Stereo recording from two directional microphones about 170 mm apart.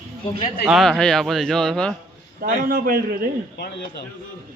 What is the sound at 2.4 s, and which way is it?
Speech, 60° right (ahead or behind).